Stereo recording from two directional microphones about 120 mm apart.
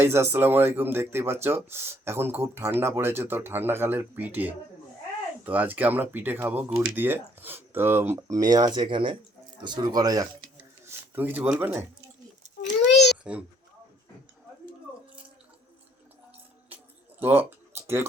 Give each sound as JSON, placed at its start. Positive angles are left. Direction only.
{"t": 0.0, "sound": "speech", "side_deg": -20}
{"t": 8.4, "sound": "speech", "side_deg": -35}
{"t": 10.8, "sound": "speech", "side_deg": -15}
{"t": 13.2, "sound": "speech", "side_deg": -10}
{"t": 17.2, "sound": "a sound", "side_deg": -15}